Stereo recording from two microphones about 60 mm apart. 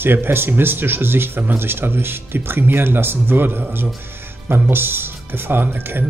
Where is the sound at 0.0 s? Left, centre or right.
Right.